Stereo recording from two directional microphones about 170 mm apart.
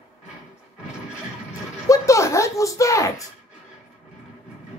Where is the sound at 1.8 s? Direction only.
20° left (ahead or behind).